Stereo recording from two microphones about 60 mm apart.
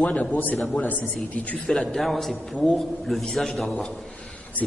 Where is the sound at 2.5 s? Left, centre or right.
Left.